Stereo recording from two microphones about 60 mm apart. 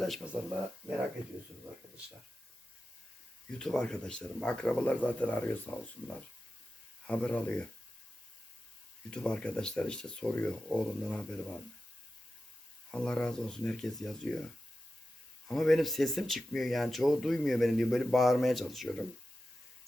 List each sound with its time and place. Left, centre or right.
0.3 s speech: right
3.6 s speech: centre
9.0 s speech: centre
12.9 s speech: centre